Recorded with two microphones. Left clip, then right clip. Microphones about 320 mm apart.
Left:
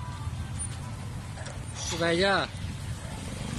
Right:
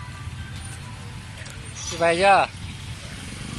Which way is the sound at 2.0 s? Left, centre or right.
Centre.